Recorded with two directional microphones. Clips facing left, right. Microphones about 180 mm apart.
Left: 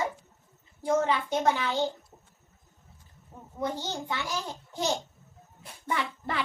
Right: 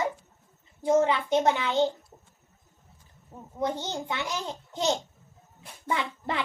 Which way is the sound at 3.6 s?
20° right (ahead or behind).